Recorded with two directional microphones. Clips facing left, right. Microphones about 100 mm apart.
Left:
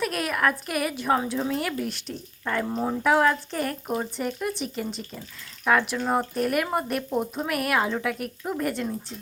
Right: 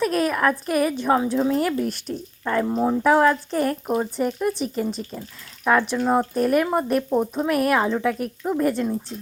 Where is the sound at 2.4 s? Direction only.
20° right (ahead or behind).